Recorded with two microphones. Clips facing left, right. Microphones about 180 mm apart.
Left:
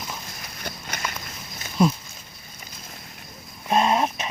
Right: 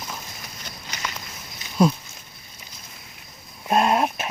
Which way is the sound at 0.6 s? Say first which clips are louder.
Left 7 dB; 55° left (ahead or behind).